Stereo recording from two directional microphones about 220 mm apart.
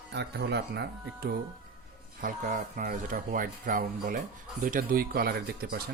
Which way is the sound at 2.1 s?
35° right (ahead or behind).